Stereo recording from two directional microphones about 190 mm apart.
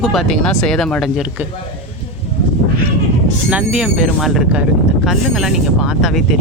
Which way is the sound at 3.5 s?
5° right (ahead or behind).